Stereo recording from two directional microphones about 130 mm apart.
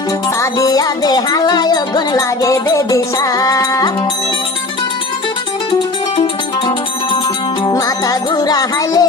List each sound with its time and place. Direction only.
0.3 s music: 25° left (ahead or behind)
7.6 s music: 25° left (ahead or behind)